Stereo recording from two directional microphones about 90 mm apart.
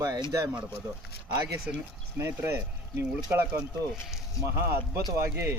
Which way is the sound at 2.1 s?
25° right (ahead or behind).